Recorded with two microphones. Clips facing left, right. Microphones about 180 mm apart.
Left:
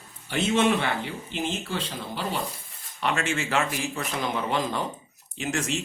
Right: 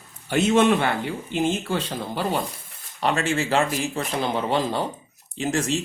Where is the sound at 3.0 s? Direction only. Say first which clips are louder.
Right 4 dB; 35° right (ahead or behind).